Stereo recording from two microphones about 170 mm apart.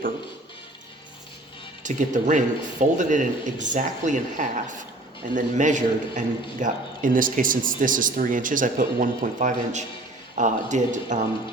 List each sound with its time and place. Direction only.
1.8 s a man's voice: 45° right (ahead or behind)